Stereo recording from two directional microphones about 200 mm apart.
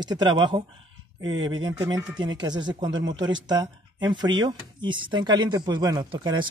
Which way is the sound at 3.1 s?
70° right (ahead or behind).